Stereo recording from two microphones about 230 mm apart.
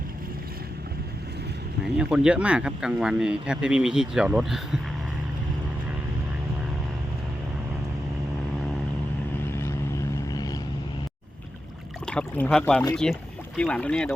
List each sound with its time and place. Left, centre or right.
1.8 s speech: centre
9.5 s vehicle: centre
12.0 s speech: centre